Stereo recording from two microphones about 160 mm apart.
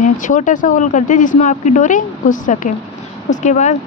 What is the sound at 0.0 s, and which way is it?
Speech, 55° left (ahead or behind).